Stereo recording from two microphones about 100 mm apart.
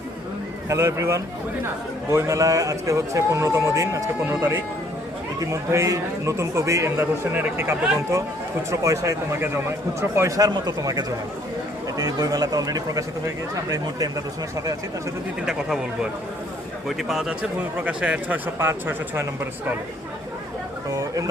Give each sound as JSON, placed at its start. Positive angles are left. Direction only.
{"t": 0.7, "sound": "a man's voice", "side_deg": -30}
{"t": 15.4, "sound": "speech", "side_deg": -5}
{"t": 17.0, "sound": "a man's voice", "side_deg": -5}
{"t": 20.9, "sound": "speech", "side_deg": -35}